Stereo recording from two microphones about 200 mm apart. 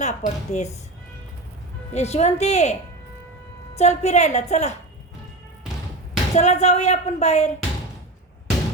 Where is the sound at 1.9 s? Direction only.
35° left (ahead or behind).